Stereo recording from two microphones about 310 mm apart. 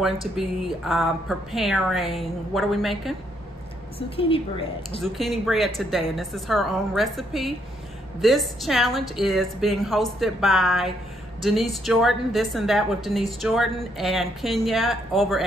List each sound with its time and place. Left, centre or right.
0.0 s a woman's voice: centre
4.2 s speech: centre
5.0 s a woman's voice: centre